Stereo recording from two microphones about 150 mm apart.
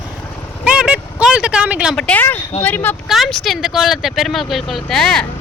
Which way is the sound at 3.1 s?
Centre (ahead or behind).